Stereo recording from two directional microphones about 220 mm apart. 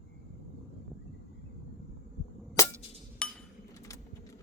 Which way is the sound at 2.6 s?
15° left (ahead or behind).